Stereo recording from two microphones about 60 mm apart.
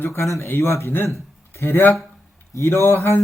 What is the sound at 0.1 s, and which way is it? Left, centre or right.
Speech, left.